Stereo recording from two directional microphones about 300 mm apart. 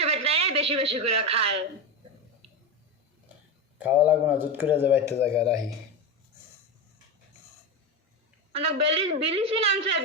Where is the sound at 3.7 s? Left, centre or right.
Centre.